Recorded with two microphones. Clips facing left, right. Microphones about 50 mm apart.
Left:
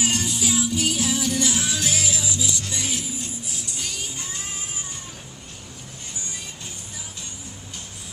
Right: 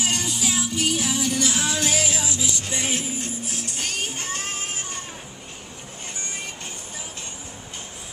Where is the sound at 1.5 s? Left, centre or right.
Right.